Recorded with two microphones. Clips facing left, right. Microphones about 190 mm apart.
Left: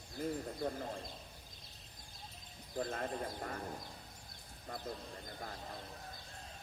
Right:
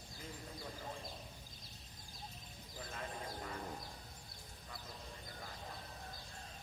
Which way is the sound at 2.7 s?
55° left (ahead or behind).